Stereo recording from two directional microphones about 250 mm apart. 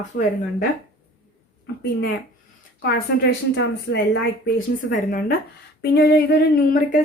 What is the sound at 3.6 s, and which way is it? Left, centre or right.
A woman's voice, left.